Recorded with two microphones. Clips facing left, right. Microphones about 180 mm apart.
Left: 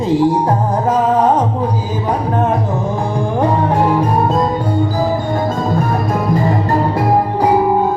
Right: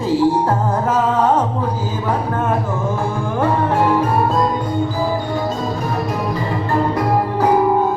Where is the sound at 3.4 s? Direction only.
15° left (ahead or behind).